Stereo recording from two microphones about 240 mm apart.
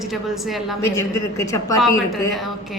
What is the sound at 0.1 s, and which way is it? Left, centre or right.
Speech, centre.